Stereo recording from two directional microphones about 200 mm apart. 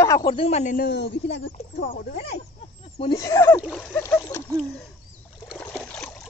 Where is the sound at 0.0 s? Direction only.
15° left (ahead or behind).